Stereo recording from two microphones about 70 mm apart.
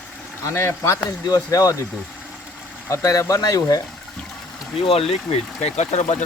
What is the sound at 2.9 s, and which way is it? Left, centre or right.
Speech, left.